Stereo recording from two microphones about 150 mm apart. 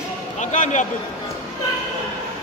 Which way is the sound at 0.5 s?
55° left (ahead or behind).